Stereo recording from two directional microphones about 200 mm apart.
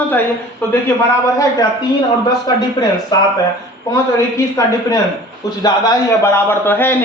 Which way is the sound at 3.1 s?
20° left (ahead or behind).